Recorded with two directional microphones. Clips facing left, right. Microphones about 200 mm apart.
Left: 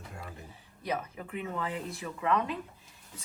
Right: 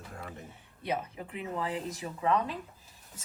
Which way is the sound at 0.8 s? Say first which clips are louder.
Even; 30° right (ahead or behind).